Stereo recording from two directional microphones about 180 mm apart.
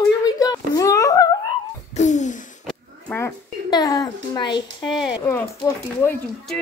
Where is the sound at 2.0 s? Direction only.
40° left (ahead or behind).